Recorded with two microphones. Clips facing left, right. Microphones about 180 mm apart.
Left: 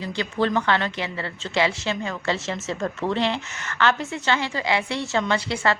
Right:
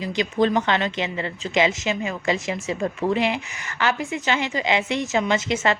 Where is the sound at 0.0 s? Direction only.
15° right (ahead or behind).